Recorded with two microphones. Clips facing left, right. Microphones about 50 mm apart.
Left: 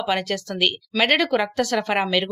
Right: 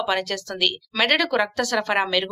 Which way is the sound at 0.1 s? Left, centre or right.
Left.